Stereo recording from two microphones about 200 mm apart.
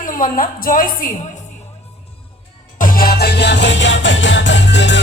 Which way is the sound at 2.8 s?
45° left (ahead or behind).